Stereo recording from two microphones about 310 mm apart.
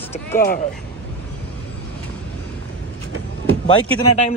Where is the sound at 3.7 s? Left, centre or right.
Centre.